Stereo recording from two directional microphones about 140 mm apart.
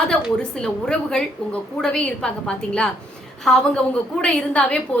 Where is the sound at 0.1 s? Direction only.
5° left (ahead or behind).